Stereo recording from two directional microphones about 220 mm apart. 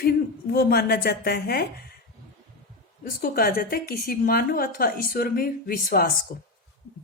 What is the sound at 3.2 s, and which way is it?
A woman's voice, 40° left (ahead or behind).